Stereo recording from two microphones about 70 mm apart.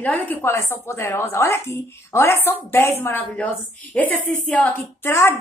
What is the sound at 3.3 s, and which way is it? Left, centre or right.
A woman's voice, left.